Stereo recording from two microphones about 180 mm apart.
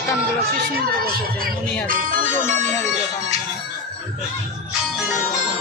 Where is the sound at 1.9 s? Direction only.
50° right (ahead or behind).